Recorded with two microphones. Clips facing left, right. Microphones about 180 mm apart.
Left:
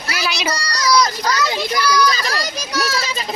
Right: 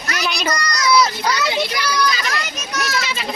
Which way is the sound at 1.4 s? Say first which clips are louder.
Left 1 dB; 40° left (ahead or behind).